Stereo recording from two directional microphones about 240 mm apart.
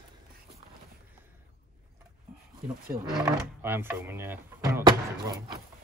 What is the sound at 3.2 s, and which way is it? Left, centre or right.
Speech, centre.